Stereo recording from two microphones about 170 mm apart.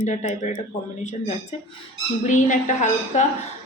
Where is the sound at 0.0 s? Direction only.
45° left (ahead or behind).